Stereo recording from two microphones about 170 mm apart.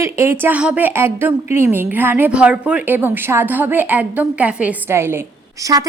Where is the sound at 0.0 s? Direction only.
15° right (ahead or behind).